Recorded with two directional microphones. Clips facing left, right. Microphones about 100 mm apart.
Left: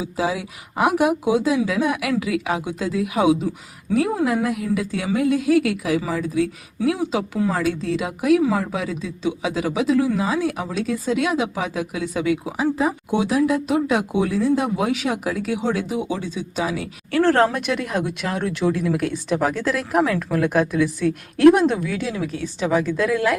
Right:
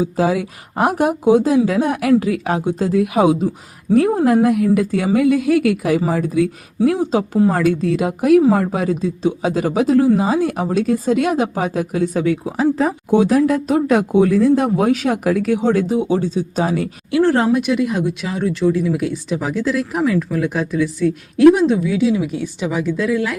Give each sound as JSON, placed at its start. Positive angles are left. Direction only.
{"t": 0.0, "sound": "speech", "side_deg": -50}
{"t": 7.0, "sound": "speech", "side_deg": -40}
{"t": 7.5, "sound": "speech", "side_deg": -50}
{"t": 17.2, "sound": "speech", "side_deg": -15}